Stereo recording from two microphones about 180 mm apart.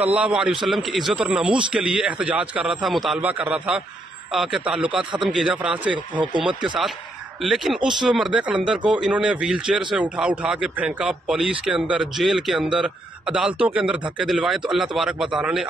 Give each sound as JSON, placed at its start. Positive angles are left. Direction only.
{"t": 0.0, "sound": "a man's voice", "side_deg": -10}